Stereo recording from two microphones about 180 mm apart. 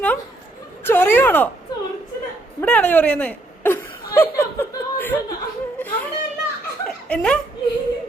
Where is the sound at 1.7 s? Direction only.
20° left (ahead or behind).